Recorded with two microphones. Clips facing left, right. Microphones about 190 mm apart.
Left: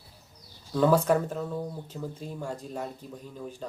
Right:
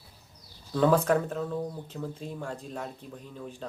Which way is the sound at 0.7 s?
5° left (ahead or behind).